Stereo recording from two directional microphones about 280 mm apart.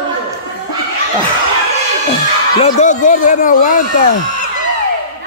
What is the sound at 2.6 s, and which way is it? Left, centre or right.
A man's voice, left.